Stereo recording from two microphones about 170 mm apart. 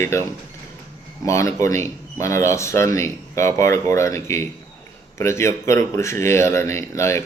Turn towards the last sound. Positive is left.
turn(degrees=15)  # may be behind; listen again after turning